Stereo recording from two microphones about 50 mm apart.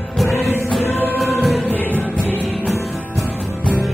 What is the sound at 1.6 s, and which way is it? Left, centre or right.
Music, left.